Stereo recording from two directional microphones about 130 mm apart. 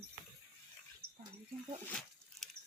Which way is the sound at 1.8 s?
5° left (ahead or behind).